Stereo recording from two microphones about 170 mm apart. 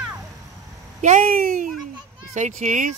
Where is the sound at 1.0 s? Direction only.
45° right (ahead or behind).